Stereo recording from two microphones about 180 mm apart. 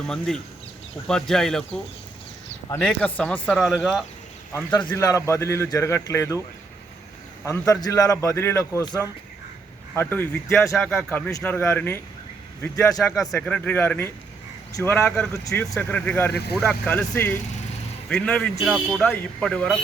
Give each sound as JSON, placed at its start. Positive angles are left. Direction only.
{"t": 0.0, "sound": "speech", "side_deg": 0}
{"t": 4.7, "sound": "speech", "side_deg": 10}
{"t": 7.7, "sound": "speech", "side_deg": 20}
{"t": 13.0, "sound": "speech", "side_deg": 0}